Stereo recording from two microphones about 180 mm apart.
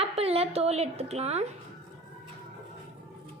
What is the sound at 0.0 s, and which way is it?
Speech, 35° right (ahead or behind).